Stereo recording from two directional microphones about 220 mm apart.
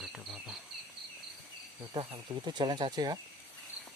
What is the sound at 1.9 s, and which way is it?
Speech, 20° right (ahead or behind).